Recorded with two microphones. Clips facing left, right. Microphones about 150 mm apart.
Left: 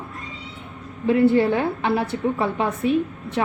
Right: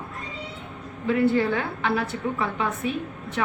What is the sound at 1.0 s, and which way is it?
A woman's voice, 25° left (ahead or behind).